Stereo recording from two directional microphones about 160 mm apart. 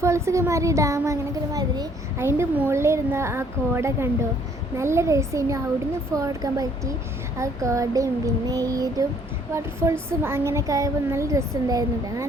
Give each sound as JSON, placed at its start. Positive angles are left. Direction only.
{"t": 0.0, "sound": "a child's voice", "side_deg": -20}
{"t": 4.8, "sound": "a sound", "side_deg": -15}
{"t": 9.6, "sound": "a child's voice", "side_deg": -15}